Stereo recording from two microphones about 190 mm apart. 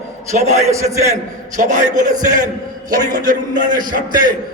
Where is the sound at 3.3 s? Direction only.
45° right (ahead or behind).